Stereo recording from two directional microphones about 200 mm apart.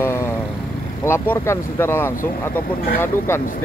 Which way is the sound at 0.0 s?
10° left (ahead or behind).